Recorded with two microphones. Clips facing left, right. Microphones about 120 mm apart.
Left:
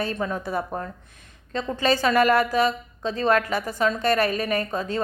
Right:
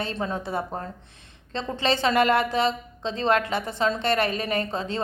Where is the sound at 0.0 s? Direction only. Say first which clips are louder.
Left 2 dB; 25° right (ahead or behind).